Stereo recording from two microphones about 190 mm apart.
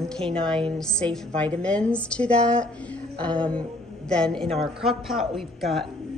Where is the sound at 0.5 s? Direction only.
5° left (ahead or behind).